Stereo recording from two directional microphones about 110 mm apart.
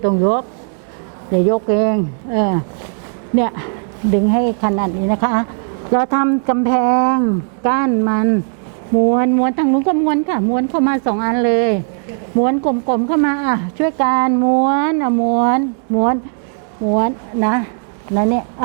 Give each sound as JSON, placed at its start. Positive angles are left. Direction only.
{"t": 0.0, "sound": "speech", "side_deg": -25}